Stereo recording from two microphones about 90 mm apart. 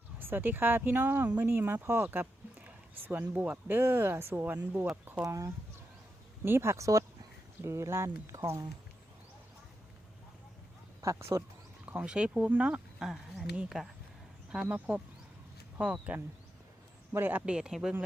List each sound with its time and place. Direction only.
0.2 s speech: 25° right (ahead or behind)
5.2 s speech: 35° right (ahead or behind)
11.0 s speech: 35° right (ahead or behind)
11.9 s speech: 10° right (ahead or behind)
13.0 s speech: 5° right (ahead or behind)
14.7 s speech: 15° right (ahead or behind)
17.4 s speech: 10° right (ahead or behind)